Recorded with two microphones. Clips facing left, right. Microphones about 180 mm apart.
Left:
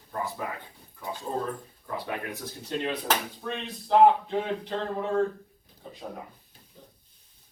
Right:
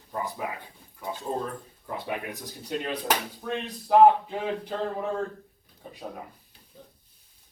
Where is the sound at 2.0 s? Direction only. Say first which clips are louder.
Right 1 dB; 15° right (ahead or behind).